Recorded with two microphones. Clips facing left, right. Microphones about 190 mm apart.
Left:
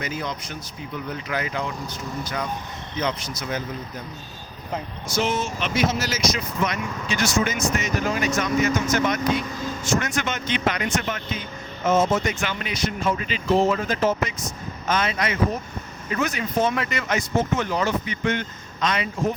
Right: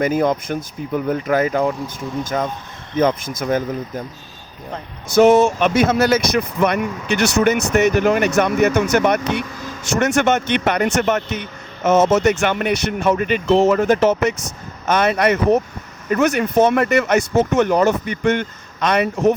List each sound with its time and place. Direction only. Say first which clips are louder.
0.0 s speech: right 13 dB; 50° right (ahead or behind)
5.4 s speech: right 9 dB; 55° right (ahead or behind)